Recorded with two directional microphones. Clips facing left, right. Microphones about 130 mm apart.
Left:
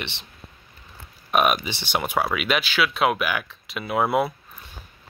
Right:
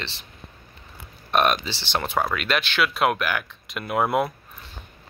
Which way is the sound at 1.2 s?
5° left (ahead or behind).